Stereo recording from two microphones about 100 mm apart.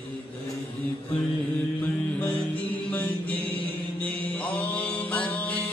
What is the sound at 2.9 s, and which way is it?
Mantra, 15° left (ahead or behind).